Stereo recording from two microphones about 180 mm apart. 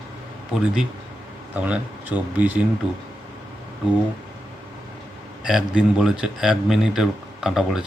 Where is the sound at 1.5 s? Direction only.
10° right (ahead or behind).